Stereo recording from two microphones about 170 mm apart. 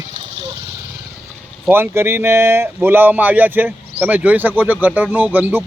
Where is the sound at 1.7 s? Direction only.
15° right (ahead or behind).